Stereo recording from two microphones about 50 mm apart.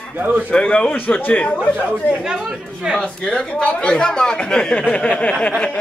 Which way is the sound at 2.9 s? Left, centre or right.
Centre.